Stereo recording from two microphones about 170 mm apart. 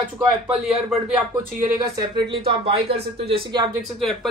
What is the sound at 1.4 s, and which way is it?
A woman's voice, 25° right (ahead or behind).